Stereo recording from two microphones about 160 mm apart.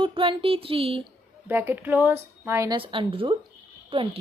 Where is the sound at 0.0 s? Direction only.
35° right (ahead or behind).